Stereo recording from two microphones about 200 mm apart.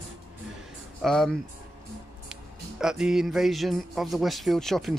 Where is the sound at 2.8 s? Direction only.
5° right (ahead or behind).